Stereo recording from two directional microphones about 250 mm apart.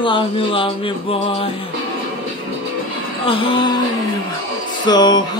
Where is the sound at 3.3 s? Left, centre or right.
Left.